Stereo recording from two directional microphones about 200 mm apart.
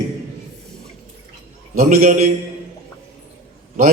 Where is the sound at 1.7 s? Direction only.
45° right (ahead or behind).